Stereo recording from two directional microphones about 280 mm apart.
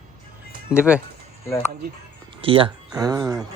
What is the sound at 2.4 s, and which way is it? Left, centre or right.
Speech, centre.